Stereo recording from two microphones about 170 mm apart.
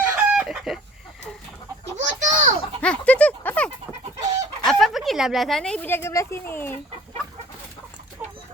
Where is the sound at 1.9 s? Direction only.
45° right (ahead or behind).